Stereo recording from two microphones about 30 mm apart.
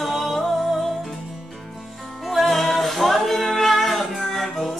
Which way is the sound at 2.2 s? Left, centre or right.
Centre.